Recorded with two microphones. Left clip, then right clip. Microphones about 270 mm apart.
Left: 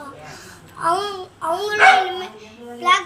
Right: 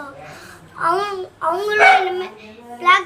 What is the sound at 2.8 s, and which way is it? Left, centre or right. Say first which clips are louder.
Speech: right 3 dB; centre.